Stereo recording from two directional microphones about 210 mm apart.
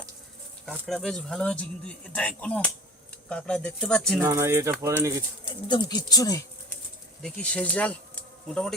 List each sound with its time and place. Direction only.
0.6 s speech: 5° left (ahead or behind)
4.2 s speech: 15° right (ahead or behind)
5.5 s speech: 20° left (ahead or behind)
7.2 s speech: 5° left (ahead or behind)